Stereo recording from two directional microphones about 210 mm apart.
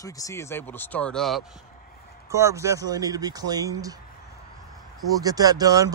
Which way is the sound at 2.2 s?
15° right (ahead or behind).